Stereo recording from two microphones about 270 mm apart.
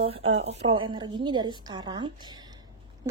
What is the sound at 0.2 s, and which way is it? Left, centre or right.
Speech, right.